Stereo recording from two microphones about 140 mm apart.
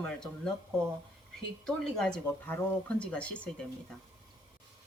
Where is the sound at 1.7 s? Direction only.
5° left (ahead or behind).